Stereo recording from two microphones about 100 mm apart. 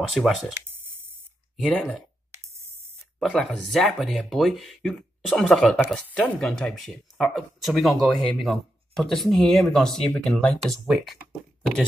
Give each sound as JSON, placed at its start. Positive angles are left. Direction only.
{"t": 0.1, "sound": "speech", "side_deg": 0}
{"t": 1.6, "sound": "speech", "side_deg": 5}
{"t": 2.4, "sound": "a sound", "side_deg": -30}
{"t": 3.2, "sound": "speech", "side_deg": 0}